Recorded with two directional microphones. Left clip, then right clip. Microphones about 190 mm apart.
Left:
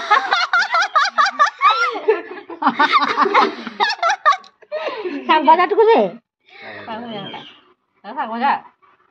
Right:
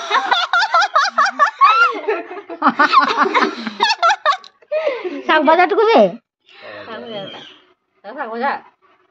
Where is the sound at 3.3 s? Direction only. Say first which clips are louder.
Left 1 dB; 10° left (ahead or behind).